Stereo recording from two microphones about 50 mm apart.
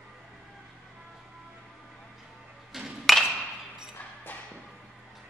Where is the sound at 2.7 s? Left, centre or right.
Centre.